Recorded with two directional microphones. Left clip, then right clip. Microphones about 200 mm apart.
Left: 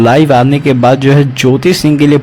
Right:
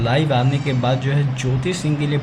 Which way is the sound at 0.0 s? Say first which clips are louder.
Left 13 dB; 45° left (ahead or behind).